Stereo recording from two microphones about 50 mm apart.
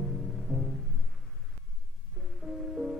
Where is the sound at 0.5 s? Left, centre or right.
Centre.